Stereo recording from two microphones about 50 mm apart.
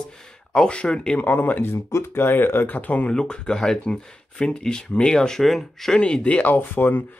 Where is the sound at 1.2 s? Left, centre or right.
Left.